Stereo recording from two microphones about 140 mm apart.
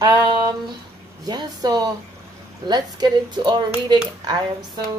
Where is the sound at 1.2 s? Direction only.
30° right (ahead or behind).